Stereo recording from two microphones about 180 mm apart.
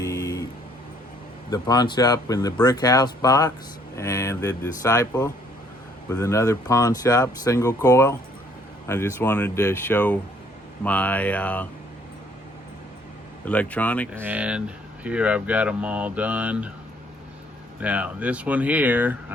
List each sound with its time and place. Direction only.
0.0 s a sound: 20° left (ahead or behind)
1.5 s speech: 20° left (ahead or behind)
13.4 s speech: 5° left (ahead or behind)
14.1 s speech: 10° right (ahead or behind)
17.7 s speech: 10° right (ahead or behind)